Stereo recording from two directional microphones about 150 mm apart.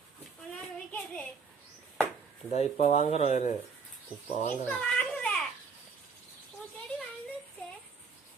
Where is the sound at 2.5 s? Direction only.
45° left (ahead or behind).